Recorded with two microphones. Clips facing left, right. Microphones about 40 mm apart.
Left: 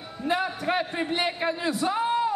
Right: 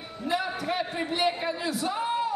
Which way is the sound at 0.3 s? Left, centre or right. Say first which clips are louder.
Left 3 dB; left.